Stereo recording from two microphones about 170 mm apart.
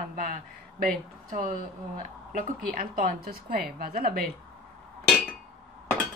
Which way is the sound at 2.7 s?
55° right (ahead or behind).